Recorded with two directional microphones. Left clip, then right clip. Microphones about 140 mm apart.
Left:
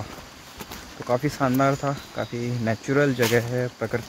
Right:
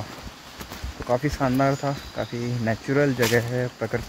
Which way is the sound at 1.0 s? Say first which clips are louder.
Even; 15° left (ahead or behind).